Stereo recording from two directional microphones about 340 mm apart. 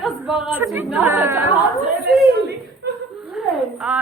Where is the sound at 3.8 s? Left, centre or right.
Centre.